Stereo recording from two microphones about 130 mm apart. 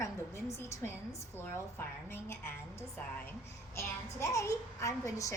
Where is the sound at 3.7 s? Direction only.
20° left (ahead or behind).